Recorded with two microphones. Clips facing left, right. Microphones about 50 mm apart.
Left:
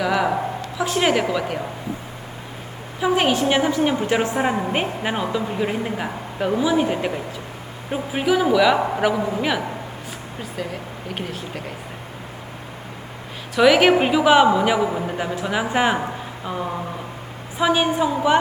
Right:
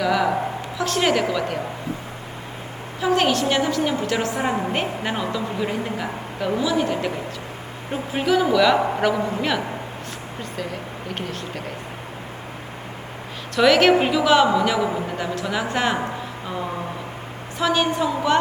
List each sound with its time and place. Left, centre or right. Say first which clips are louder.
0.0 s speech: even; centre
3.0 s a woman's voice: left 1 dB; centre
8.1 s a man's voice: left 1 dB; centre
11.1 s a man's voice: left 1 dB; centre
13.6 s a woman's voice: left 1 dB; centre
17.6 s speech: left 2 dB; centre